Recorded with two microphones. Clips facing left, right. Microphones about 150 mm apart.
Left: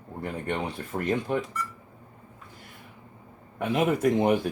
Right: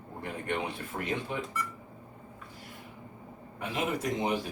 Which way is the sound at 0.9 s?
40° left (ahead or behind).